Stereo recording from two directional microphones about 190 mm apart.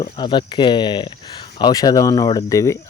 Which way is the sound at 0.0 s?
25° left (ahead or behind).